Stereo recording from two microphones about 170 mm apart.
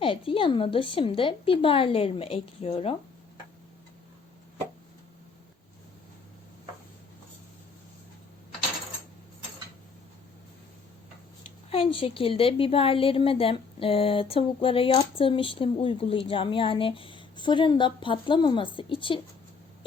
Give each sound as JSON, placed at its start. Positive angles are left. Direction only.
{"t": 0.0, "sound": "a woman's voice", "side_deg": 30}
{"t": 11.7, "sound": "a woman's voice", "side_deg": 30}